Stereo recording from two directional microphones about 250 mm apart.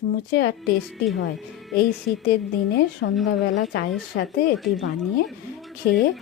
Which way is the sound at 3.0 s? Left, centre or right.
Left.